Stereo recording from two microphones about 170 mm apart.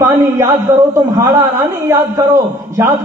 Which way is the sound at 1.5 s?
15° right (ahead or behind).